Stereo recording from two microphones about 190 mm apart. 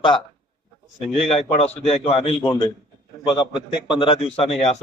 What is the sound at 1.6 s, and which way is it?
Speech, 35° left (ahead or behind).